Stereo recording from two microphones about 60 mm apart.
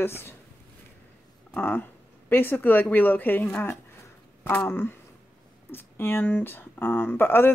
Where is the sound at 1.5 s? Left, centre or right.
Left.